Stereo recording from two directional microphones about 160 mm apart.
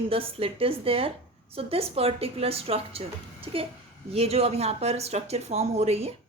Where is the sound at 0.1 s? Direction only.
35° right (ahead or behind).